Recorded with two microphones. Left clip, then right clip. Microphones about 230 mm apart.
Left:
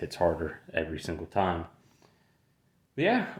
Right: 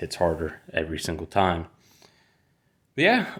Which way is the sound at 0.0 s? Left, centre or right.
Right.